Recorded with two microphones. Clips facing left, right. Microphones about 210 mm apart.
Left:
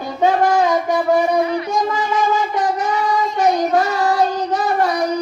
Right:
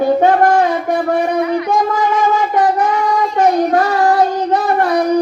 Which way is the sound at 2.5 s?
60° right (ahead or behind).